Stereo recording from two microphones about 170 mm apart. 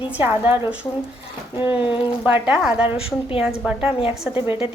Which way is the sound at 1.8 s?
30° left (ahead or behind).